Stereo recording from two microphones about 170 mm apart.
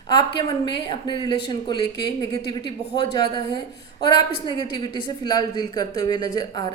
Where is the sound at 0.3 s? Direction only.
30° left (ahead or behind).